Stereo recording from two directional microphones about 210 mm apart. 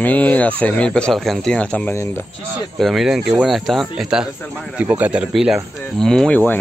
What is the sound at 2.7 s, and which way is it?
Speech, centre (ahead or behind).